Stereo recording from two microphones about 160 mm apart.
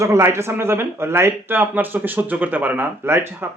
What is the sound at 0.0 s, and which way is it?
Speech, 20° right (ahead or behind).